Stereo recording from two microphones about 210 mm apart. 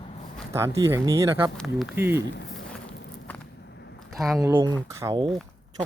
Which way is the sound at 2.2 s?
55° left (ahead or behind).